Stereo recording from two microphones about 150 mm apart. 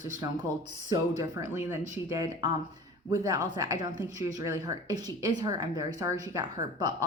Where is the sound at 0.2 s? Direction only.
25° right (ahead or behind).